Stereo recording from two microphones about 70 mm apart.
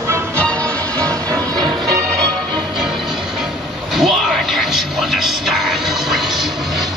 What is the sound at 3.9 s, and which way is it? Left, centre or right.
Music, centre.